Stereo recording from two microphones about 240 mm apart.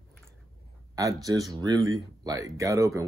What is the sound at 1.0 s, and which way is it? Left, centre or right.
Speech, centre.